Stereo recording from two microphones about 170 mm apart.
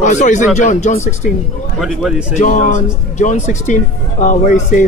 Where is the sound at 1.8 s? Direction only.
Centre (ahead or behind).